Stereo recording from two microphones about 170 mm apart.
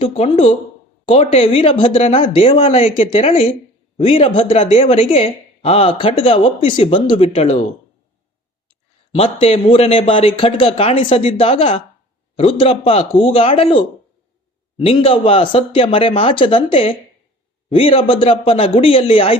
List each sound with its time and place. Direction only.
0.0 s a woman's voice: 35° left (ahead or behind)
9.1 s a woman's voice: 35° left (ahead or behind)